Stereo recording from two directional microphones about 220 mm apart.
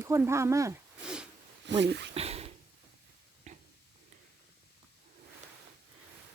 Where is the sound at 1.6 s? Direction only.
50° right (ahead or behind).